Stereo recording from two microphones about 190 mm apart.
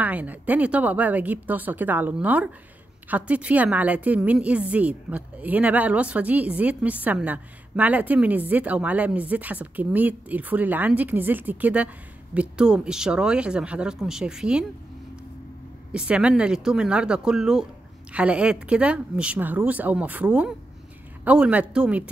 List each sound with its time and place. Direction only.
0.0 s a woman's voice: 10° right (ahead or behind)
15.9 s a woman's voice: 5° right (ahead or behind)